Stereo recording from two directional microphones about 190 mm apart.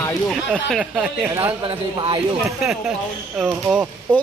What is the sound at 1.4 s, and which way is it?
Speech, 25° right (ahead or behind).